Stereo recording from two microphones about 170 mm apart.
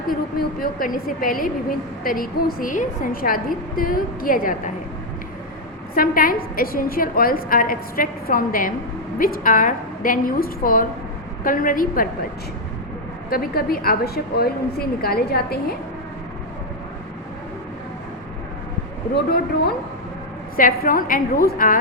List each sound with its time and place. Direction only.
0.1 s a woman's voice: 55° left (ahead or behind)
5.9 s a woman's voice: 55° left (ahead or behind)
13.3 s a woman's voice: 60° left (ahead or behind)
19.1 s a woman's voice: 70° left (ahead or behind)
20.6 s a woman's voice: 55° left (ahead or behind)